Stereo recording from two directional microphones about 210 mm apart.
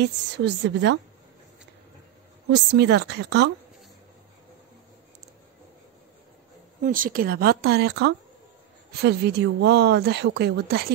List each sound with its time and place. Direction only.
0.0 s a woman's voice: 55° right (ahead or behind)
2.5 s a woman's voice: 55° right (ahead or behind)
6.8 s a woman's voice: 40° right (ahead or behind)